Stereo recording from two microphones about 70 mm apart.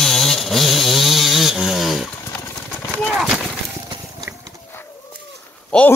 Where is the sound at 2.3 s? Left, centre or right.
Left.